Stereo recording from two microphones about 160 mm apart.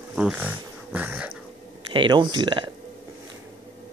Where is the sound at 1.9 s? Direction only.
30° right (ahead or behind).